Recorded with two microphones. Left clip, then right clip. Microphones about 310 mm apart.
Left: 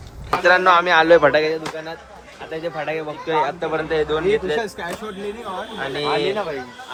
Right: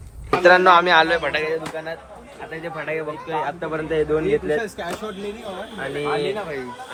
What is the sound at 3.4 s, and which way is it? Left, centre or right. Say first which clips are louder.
A man's voice: left 3 dB; centre.